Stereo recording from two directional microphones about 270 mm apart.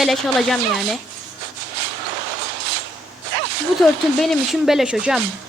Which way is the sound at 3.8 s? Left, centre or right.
Centre.